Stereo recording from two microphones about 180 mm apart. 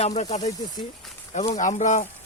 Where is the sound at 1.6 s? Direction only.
45° left (ahead or behind).